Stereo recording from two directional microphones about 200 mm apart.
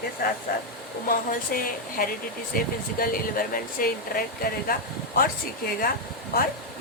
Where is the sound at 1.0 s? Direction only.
45° left (ahead or behind).